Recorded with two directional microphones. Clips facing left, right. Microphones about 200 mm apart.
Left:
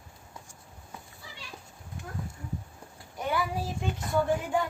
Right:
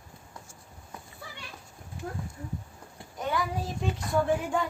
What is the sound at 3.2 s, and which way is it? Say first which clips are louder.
Child singing: even; 5° left (ahead or behind).